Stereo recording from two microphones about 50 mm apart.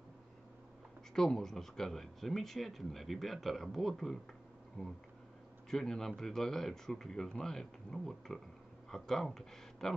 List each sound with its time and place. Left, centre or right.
1.1 s speech: centre
4.8 s speech: centre